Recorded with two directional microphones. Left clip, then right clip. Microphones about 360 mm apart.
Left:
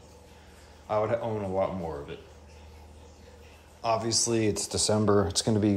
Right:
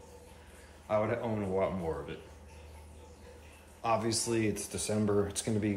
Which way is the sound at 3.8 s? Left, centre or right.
Centre.